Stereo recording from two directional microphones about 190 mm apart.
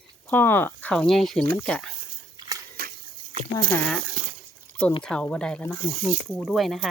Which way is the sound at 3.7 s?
10° left (ahead or behind).